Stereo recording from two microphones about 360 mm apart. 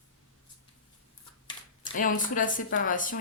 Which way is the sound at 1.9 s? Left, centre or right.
Left.